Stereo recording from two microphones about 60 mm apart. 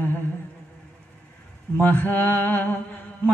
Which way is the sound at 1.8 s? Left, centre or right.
Left.